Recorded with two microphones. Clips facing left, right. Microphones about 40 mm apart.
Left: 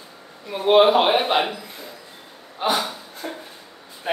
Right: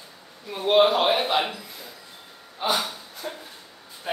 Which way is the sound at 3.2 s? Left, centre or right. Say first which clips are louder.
Left 3 dB; left.